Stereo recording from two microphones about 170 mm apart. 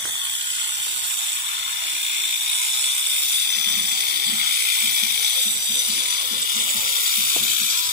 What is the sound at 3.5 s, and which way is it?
Ratchet, 70° right (ahead or behind).